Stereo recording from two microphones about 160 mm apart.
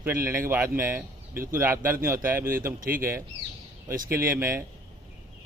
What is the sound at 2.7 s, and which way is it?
Speech, 65° right (ahead or behind).